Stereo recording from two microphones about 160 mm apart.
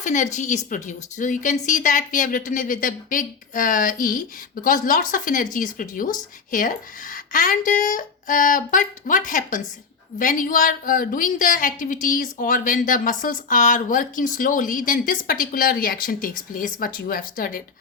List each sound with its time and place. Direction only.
0.0 s a woman's voice: 50° left (ahead or behind)